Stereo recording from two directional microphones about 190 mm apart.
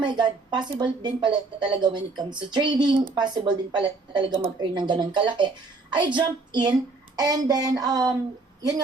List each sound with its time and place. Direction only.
0.0 s speech: 25° right (ahead or behind)